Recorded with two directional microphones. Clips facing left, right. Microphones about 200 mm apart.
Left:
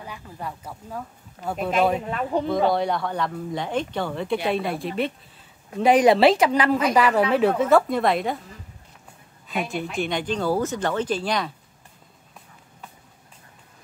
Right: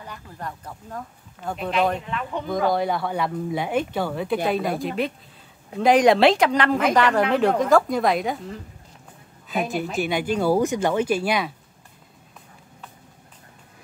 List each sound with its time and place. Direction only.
0.0 s speech: 10° left (ahead or behind)
2.0 s speech: 40° left (ahead or behind)
2.7 s a woman's voice: 5° right (ahead or behind)
9.5 s a woman's voice: centre (ahead or behind)